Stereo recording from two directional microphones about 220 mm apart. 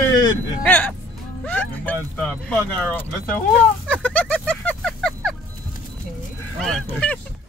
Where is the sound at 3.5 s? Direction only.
5° left (ahead or behind).